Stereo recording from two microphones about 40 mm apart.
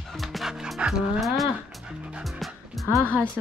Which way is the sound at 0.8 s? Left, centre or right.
Centre.